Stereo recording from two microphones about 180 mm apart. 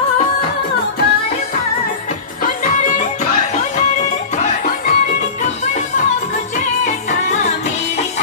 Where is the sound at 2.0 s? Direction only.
45° left (ahead or behind).